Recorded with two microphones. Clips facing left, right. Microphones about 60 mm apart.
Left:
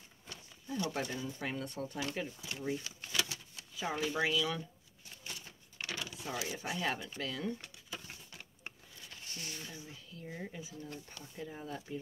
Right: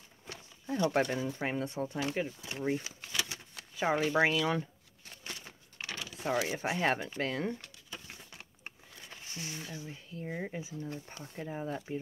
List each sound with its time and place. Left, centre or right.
0.3 s a sound: right
1.4 s speech: right
1.7 s speech: right
2.5 s speech: right
5.2 s a sound: right
6.1 s speech: right
9.1 s speech: right